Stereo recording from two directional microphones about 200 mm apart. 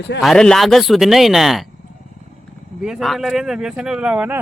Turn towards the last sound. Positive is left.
turn(degrees=-5)  # may be behind; listen again after turning